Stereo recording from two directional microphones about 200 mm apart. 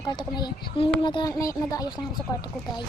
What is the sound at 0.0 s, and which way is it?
Speech, 20° left (ahead or behind).